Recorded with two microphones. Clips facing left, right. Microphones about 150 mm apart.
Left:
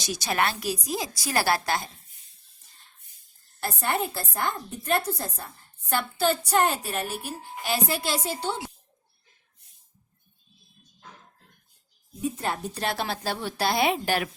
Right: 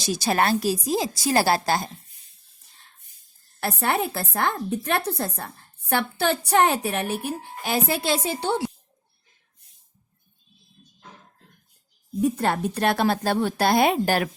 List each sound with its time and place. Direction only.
0.0 s a woman's voice: 30° right (ahead or behind)
3.6 s a woman's voice: 70° right (ahead or behind)
12.2 s speech: 70° right (ahead or behind); by 14.3 s 45° right (ahead or behind)